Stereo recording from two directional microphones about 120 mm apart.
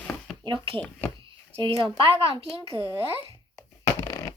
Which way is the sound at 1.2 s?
45° right (ahead or behind).